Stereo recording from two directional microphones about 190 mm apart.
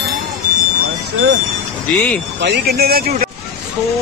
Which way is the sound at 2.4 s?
60° right (ahead or behind).